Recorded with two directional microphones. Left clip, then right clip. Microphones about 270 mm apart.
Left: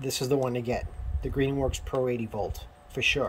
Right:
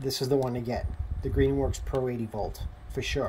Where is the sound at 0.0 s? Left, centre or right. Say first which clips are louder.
Even; centre.